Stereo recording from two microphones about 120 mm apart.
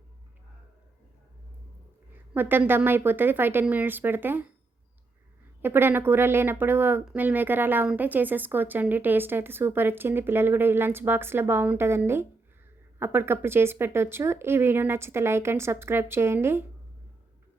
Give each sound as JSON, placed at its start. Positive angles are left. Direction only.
{"t": 2.1, "sound": "a woman's voice", "side_deg": -15}
{"t": 5.6, "sound": "a woman's voice", "side_deg": -15}